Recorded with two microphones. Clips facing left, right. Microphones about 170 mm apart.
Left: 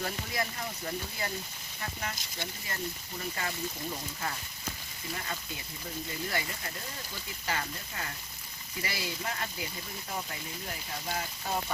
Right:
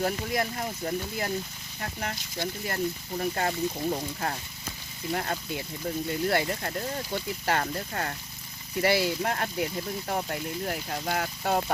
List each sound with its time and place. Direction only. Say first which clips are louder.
0.0 s speech: right 7 dB; 40° right (ahead or behind); by 8.1 s 60° right (ahead or behind)
8.8 s speech: right 12 dB; 70° right (ahead or behind)